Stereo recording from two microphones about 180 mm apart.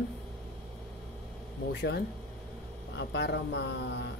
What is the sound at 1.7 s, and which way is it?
Speech, 75° left (ahead or behind).